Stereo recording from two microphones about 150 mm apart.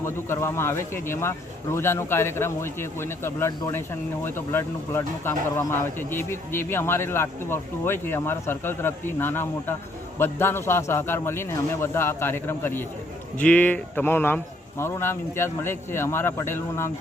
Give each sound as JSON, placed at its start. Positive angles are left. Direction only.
{"t": 0.0, "sound": "speech", "side_deg": 15}